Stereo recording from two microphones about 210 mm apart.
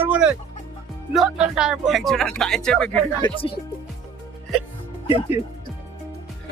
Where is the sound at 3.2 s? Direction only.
25° left (ahead or behind).